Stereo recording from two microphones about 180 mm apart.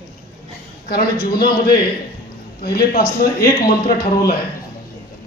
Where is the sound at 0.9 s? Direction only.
55° left (ahead or behind).